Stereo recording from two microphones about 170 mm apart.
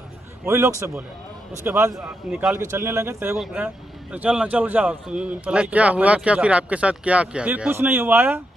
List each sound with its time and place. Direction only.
0.5 s a man's voice: 15° right (ahead or behind)